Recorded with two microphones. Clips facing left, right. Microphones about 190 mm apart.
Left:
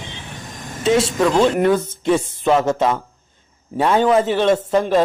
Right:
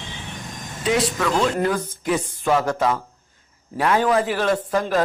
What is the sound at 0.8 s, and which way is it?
Speech, 25° left (ahead or behind).